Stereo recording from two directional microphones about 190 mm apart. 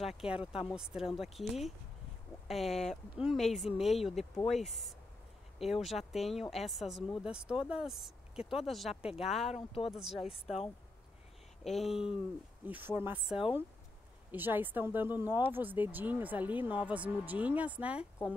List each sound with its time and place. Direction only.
0.0 s speech: 5° right (ahead or behind)
9.5 s speech: 30° left (ahead or behind)
9.9 s speech: centre (ahead or behind)
11.6 s speech: centre (ahead or behind)